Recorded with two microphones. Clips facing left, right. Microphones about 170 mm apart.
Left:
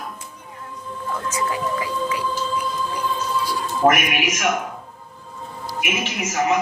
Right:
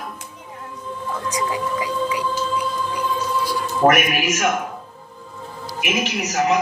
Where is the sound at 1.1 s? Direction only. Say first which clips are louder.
Even; 15° right (ahead or behind).